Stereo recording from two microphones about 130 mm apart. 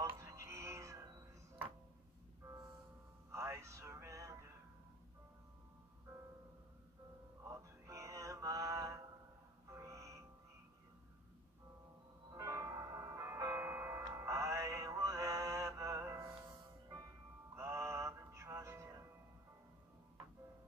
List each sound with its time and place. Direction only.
0.2 s music: 25° right (ahead or behind)
3.3 s music: 20° right (ahead or behind)
7.4 s music: 25° right (ahead or behind)
12.4 s music: 25° right (ahead or behind)
17.6 s music: 20° right (ahead or behind)